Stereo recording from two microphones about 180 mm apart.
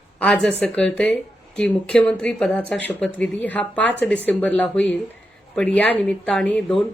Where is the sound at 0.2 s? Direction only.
5° left (ahead or behind).